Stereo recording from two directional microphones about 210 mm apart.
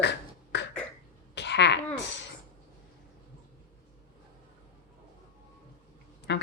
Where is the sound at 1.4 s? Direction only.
55° left (ahead or behind).